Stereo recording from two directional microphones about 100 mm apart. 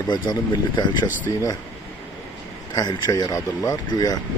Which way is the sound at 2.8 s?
40° left (ahead or behind).